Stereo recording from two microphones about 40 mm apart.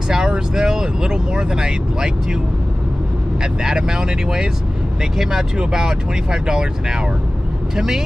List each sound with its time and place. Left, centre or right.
0.3 s speech: centre
3.6 s speech: centre